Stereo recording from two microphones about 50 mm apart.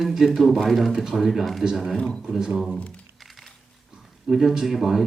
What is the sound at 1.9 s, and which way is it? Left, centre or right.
Speech, centre.